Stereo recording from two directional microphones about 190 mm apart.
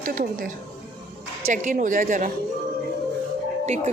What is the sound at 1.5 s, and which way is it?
Speech, 40° right (ahead or behind).